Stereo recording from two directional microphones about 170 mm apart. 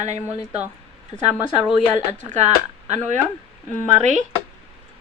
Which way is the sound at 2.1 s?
45° right (ahead or behind).